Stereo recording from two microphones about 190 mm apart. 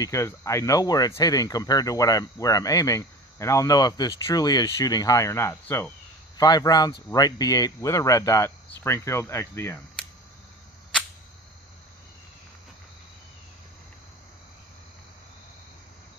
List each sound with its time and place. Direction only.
0.0 s speech: 15° left (ahead or behind)